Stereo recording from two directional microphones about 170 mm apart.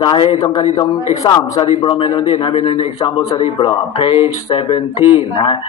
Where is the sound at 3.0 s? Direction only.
25° left (ahead or behind); by 4.8 s 40° left (ahead or behind).